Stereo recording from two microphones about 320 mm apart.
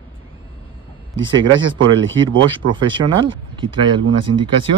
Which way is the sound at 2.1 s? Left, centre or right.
Right.